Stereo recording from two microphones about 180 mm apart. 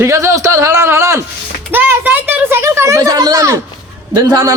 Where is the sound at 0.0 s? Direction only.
15° right (ahead or behind).